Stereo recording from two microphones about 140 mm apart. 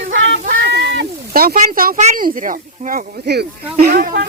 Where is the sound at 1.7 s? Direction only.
90° right.